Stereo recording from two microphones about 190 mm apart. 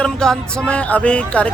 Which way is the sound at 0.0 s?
5° left (ahead or behind).